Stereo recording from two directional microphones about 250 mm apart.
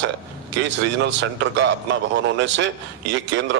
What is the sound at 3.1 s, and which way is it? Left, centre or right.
Speech, right.